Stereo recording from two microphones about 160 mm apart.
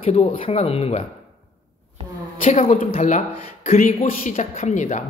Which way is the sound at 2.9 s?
45° left (ahead or behind).